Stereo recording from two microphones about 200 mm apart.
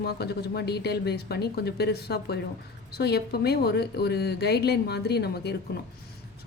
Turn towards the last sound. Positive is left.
turn(degrees=55)  # may be behind; listen again after turning